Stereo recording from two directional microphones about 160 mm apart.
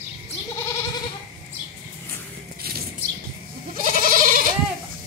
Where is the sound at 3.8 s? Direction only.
60° right (ahead or behind).